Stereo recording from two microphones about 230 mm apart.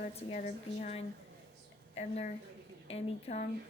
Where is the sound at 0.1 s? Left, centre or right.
Left.